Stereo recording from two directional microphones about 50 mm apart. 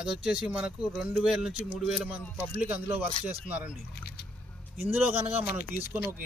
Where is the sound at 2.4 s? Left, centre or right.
Right.